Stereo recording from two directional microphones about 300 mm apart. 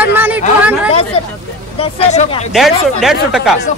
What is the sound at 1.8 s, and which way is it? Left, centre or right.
Speech, centre.